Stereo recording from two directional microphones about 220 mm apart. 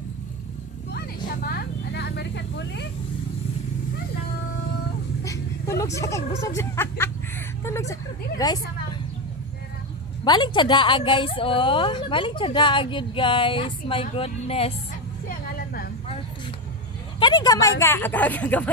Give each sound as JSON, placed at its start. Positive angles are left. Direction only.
{"t": 0.9, "sound": "vehicle", "side_deg": 45}
{"t": 5.2, "sound": "vehicle", "side_deg": 15}
{"t": 5.9, "sound": "speech", "side_deg": 15}
{"t": 6.4, "sound": "a sound", "side_deg": 10}
{"t": 8.4, "sound": "a woman's voice", "side_deg": 15}
{"t": 10.2, "sound": "a woman's voice", "side_deg": 20}
{"t": 15.2, "sound": "vehicle", "side_deg": 45}
{"t": 17.2, "sound": "speech", "side_deg": 20}